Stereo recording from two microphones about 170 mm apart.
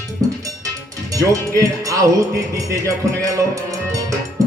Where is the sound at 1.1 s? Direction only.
20° right (ahead or behind).